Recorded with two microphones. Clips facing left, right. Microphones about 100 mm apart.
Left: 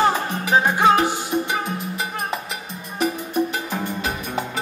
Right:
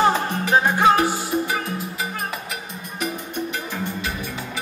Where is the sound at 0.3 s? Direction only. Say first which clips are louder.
Even; 15° left (ahead or behind).